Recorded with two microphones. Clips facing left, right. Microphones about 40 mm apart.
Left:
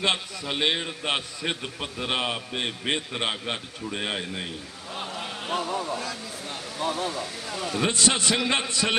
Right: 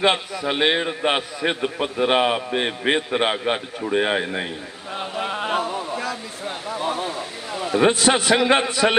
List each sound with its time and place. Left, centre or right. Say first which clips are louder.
0.0 s a man's voice: right 7 dB; centre
4.9 s a sound: right 8 dB; right
7.9 s a man's voice: right 6 dB; centre